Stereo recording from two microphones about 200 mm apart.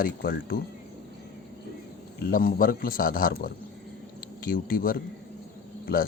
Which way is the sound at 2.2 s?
45° left (ahead or behind).